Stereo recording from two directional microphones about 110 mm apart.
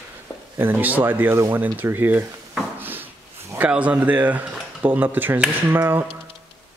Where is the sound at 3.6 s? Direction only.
10° right (ahead or behind).